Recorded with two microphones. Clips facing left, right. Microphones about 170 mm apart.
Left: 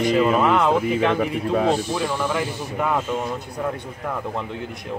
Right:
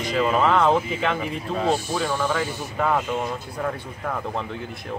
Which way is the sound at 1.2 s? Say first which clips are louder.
Left 6 dB; 55° left (ahead or behind).